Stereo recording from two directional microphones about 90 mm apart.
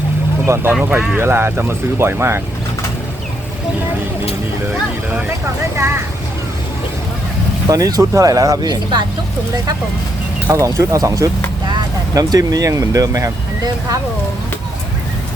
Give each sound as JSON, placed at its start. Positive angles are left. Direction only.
{"t": 0.4, "sound": "speech", "side_deg": -30}
{"t": 0.7, "sound": "speech", "side_deg": -10}
{"t": 1.1, "sound": "speech", "side_deg": -25}
{"t": 5.7, "sound": "speech", "side_deg": -30}
{"t": 7.7, "sound": "speech", "side_deg": -45}
{"t": 10.5, "sound": "speech", "side_deg": -35}